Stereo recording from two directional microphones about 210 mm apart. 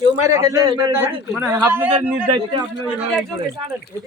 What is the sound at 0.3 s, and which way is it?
Speech, 15° right (ahead or behind).